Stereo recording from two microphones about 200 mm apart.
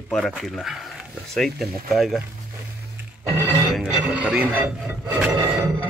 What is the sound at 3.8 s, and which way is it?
Speech, 5° right (ahead or behind).